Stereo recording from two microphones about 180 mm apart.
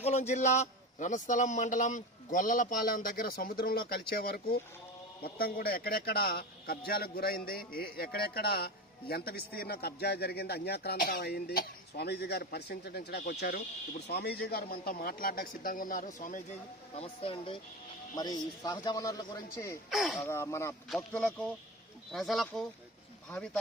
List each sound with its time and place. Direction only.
0.0 s a man's voice: 40° left (ahead or behind)
16.9 s a man's voice: 35° left (ahead or behind)
19.9 s speech: centre (ahead or behind)
20.1 s speech: 15° left (ahead or behind)